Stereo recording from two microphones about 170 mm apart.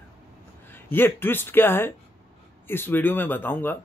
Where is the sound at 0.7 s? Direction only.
10° left (ahead or behind).